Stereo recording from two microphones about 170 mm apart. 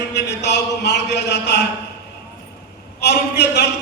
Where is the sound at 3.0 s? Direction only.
80° left.